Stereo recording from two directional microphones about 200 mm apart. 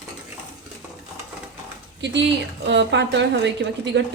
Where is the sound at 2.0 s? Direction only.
60° right (ahead or behind).